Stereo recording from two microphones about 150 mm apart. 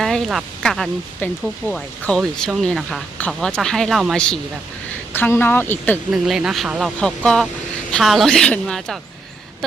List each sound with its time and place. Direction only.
0.0 s speech: centre (ahead or behind)
5.1 s speech: 15° left (ahead or behind)
6.1 s speech: 5° right (ahead or behind)